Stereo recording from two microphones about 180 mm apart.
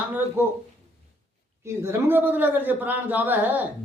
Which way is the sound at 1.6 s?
15° right (ahead or behind).